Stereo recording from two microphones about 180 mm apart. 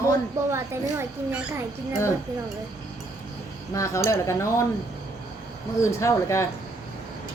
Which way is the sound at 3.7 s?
15° left (ahead or behind).